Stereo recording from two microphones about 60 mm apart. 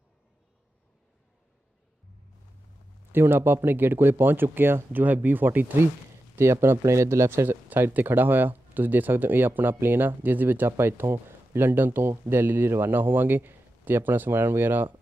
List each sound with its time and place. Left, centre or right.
3.1 s speech: right
6.3 s speech: right
7.4 s speech: right